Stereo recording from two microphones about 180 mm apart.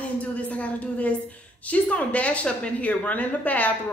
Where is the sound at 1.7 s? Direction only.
10° left (ahead or behind).